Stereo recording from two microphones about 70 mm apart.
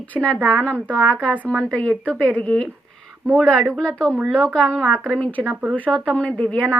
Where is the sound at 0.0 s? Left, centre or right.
Centre.